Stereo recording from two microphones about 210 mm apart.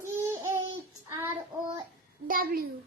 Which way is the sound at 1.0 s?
10° right (ahead or behind).